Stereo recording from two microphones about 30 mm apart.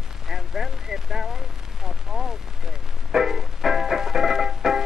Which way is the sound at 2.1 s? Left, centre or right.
Centre.